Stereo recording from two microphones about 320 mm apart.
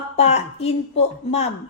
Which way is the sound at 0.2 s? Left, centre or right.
Centre.